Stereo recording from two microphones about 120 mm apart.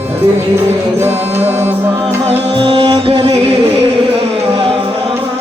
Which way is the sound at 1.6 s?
20° right (ahead or behind).